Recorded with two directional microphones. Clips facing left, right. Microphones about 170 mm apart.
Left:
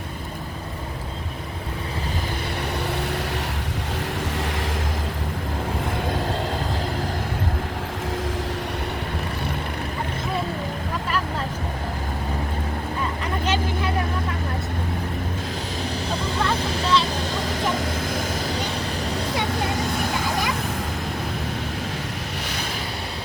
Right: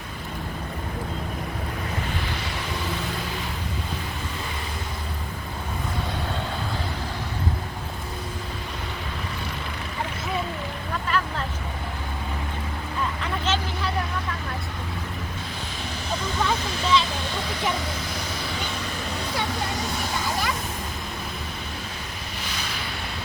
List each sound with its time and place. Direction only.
13.4 s vehicle: 10° left (ahead or behind)
16.4 s a sound: centre (ahead or behind)
17.5 s vehicle: 45° left (ahead or behind)